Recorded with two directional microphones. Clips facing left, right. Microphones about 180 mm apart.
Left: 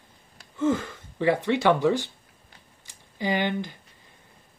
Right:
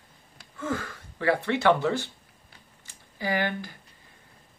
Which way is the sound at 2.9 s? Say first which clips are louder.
Left 2 dB; 20° left (ahead or behind).